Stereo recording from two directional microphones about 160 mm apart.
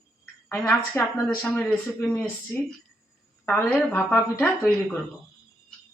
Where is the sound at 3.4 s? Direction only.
10° left (ahead or behind).